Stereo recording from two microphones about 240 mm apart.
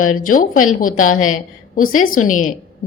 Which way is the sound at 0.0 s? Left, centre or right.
Left.